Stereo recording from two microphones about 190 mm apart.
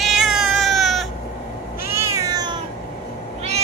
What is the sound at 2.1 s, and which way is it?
Cat, 20° right (ahead or behind).